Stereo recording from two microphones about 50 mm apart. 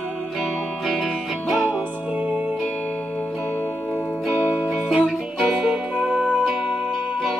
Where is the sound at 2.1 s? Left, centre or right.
Right.